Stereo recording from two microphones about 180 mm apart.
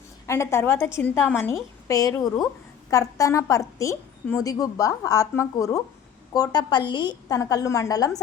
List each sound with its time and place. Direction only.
0.3 s a woman's voice: 15° left (ahead or behind)